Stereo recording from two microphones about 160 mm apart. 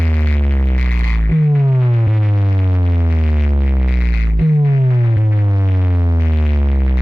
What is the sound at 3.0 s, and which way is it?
Music, 10° right (ahead or behind).